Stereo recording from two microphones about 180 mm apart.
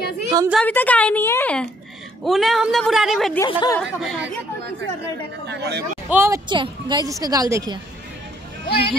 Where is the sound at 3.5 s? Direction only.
25° left (ahead or behind).